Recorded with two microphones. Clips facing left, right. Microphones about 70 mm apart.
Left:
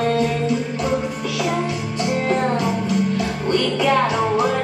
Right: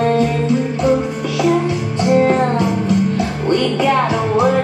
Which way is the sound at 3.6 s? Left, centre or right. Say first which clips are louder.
Right 1 dB; centre.